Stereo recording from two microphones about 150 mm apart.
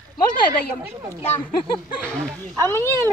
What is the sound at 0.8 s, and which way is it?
Speech, 20° right (ahead or behind).